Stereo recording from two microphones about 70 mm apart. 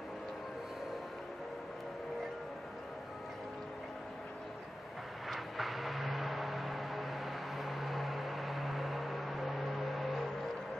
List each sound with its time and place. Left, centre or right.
5.3 s vehicle: centre